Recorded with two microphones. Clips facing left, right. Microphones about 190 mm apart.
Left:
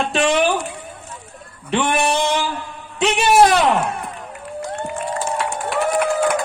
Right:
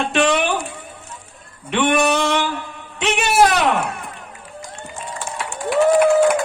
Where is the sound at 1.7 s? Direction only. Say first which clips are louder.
Right 2 dB; 30° left (ahead or behind).